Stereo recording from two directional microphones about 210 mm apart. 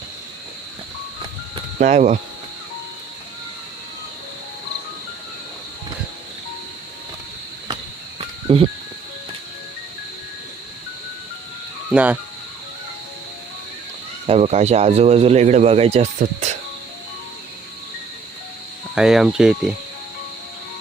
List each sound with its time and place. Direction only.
1.8 s speech: 35° right (ahead or behind)
8.5 s music: 30° right (ahead or behind)
11.9 s speech: 5° right (ahead or behind)
14.3 s speech: 30° right (ahead or behind)
18.9 s speech: 5° right (ahead or behind)